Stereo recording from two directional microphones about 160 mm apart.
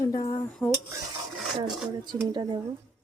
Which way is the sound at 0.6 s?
Centre (ahead or behind).